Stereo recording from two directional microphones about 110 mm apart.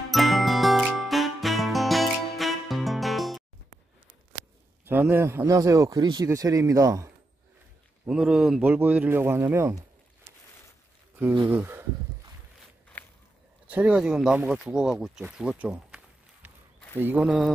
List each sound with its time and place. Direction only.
0.1 s music: centre (ahead or behind)
4.8 s a man's voice: 20° right (ahead or behind)
8.1 s speech: 10° right (ahead or behind); by 9.8 s 25° right (ahead or behind)
11.5 s speech: 15° right (ahead or behind)
12.9 s a sound: 15° left (ahead or behind)
13.7 s speech: 10° right (ahead or behind)
16.4 s run: 15° right (ahead or behind)
17.0 s speech: 10° right (ahead or behind)